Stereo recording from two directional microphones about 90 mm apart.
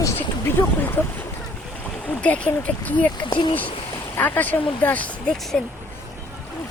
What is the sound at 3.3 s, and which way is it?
Speech, 55° left (ahead or behind).